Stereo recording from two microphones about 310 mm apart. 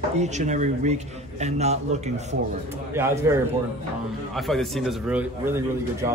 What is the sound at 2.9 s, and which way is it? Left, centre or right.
Speech, centre.